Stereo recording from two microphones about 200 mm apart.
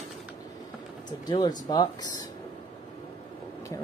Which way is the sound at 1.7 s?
20° left (ahead or behind).